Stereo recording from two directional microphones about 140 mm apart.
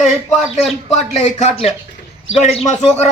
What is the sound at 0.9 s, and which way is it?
A man's voice, 55° left (ahead or behind).